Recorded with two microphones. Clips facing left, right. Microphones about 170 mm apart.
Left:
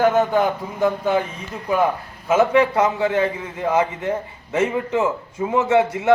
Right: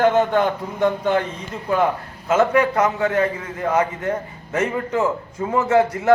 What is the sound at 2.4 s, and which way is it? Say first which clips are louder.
A man's voice: left 1 dB; 25° left (ahead or behind).